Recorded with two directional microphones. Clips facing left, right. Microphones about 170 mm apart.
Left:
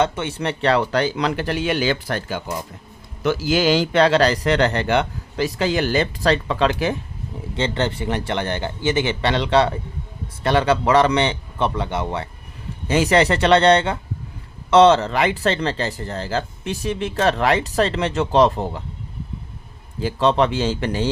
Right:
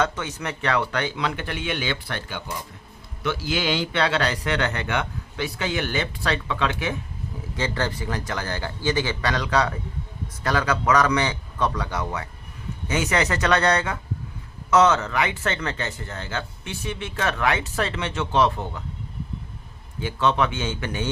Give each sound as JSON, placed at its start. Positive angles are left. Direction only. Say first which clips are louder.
{"t": 0.0, "sound": "speech", "louder": "left 5 dB", "side_deg": 25}
{"t": 7.5, "sound": "a man's voice", "louder": "left 4 dB", "side_deg": 25}
{"t": 20.0, "sound": "speech", "louder": "left 5 dB", "side_deg": 35}